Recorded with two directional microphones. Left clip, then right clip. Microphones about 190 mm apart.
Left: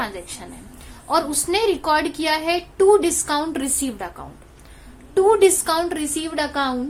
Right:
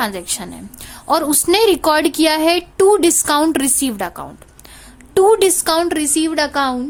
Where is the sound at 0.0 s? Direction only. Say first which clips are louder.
Right 7 dB; 55° right (ahead or behind).